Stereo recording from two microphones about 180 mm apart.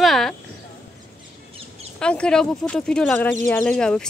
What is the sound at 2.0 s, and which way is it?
Speech, 5° left (ahead or behind).